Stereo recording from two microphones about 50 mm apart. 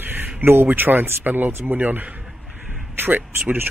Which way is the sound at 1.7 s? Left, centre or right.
Right.